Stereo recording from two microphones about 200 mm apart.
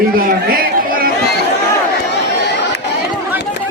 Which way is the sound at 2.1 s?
60° left (ahead or behind).